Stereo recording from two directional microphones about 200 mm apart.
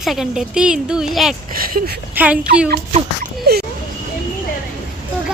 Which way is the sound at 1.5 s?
45° right (ahead or behind).